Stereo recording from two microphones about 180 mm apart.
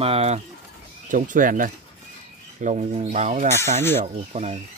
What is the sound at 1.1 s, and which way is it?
Speech, 45° right (ahead or behind).